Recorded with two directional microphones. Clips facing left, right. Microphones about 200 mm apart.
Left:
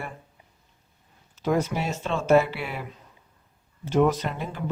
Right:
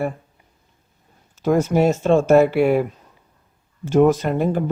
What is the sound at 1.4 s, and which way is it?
Speech, 45° right (ahead or behind).